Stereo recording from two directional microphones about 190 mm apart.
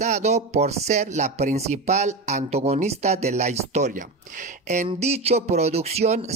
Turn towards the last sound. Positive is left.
turn(degrees=-35)  # may be behind; listen again after turning